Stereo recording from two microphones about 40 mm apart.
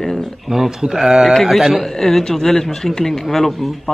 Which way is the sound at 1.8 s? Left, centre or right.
Centre.